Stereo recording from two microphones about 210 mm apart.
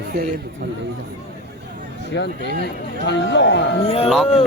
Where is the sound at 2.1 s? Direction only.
55° left (ahead or behind).